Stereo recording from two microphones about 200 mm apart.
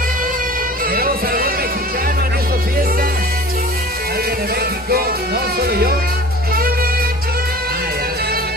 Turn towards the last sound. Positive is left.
turn(degrees=-50)  # may be behind; listen again after turning